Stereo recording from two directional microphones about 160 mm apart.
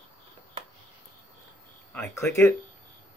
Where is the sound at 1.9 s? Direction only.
15° left (ahead or behind).